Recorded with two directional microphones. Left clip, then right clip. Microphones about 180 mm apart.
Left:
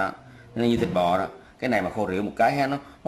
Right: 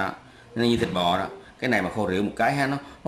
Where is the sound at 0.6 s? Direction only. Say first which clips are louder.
Left 1 dB; 5° left (ahead or behind).